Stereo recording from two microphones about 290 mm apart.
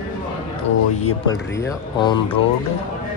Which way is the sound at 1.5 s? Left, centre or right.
Centre.